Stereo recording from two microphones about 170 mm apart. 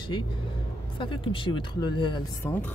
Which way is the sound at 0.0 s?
25° left (ahead or behind).